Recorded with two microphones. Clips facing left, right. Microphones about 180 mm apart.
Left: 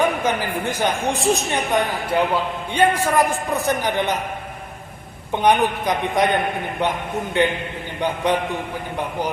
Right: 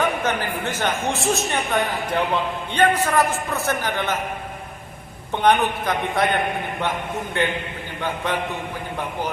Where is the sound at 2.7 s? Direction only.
10° left (ahead or behind).